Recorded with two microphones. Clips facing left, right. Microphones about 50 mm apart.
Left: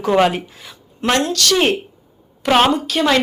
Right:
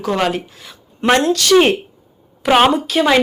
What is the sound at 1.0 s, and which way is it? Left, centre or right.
Speech, centre.